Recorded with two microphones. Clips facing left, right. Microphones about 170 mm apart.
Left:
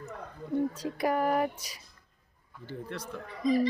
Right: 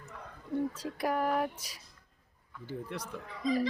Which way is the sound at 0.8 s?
Centre (ahead or behind).